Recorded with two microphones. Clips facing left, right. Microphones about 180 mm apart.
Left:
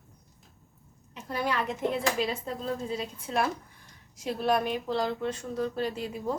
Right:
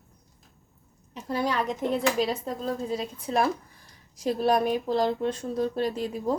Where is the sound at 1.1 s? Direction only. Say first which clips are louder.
Right 3 dB; 35° right (ahead or behind).